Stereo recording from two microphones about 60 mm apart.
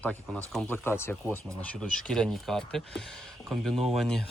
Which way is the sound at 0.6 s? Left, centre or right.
Left.